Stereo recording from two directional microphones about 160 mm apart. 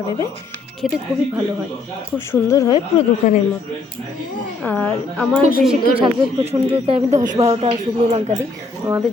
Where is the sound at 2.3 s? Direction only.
20° left (ahead or behind).